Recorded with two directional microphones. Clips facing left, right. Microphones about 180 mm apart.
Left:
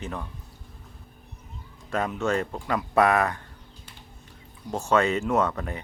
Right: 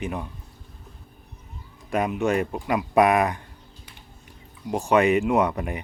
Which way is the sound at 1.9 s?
15° right (ahead or behind).